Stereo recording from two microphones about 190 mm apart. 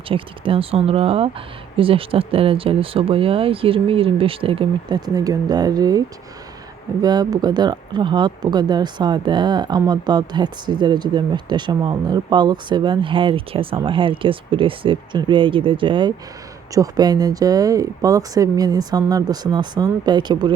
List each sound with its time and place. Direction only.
0.1 s speech: 30° right (ahead or behind)
7.0 s speech: 20° right (ahead or behind)